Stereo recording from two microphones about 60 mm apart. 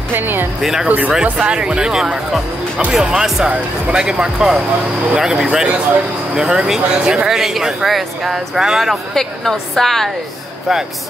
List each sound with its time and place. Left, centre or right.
0.1 s speech: right
0.6 s a woman's voice: centre
0.8 s speech: right; by 8.9 s centre
9.1 s a woman's voice: centre